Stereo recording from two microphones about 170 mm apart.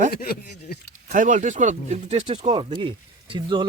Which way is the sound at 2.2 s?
30° right (ahead or behind).